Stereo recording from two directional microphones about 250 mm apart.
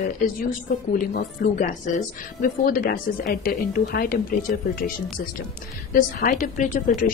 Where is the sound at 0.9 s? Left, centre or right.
Left.